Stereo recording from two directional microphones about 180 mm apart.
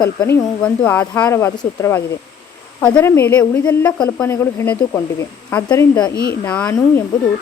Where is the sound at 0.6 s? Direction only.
10° left (ahead or behind).